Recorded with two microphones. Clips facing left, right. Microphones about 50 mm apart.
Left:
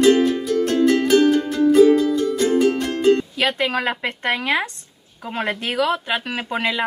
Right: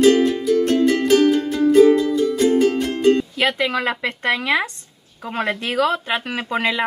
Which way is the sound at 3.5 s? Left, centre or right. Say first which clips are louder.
Right 1 dB; left.